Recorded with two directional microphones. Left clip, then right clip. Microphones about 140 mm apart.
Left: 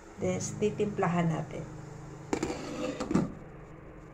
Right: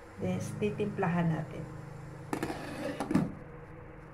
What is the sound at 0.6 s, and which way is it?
Speech, 25° left (ahead or behind).